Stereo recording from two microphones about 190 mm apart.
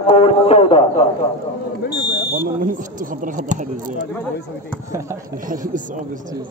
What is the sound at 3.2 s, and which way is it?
Speech, 40° right (ahead or behind).